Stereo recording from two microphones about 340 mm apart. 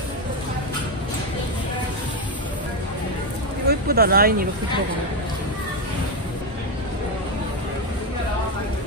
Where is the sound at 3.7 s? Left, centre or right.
Right.